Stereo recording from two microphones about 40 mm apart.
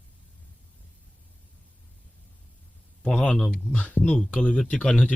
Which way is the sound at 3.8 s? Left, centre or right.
Left.